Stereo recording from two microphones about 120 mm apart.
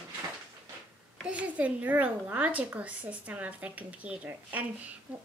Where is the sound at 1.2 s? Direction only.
10° right (ahead or behind).